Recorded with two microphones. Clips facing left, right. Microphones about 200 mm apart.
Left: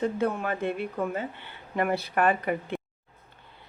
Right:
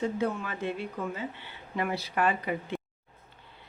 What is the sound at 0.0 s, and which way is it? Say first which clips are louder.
Speech: left 3 dB; 55° left (ahead or behind).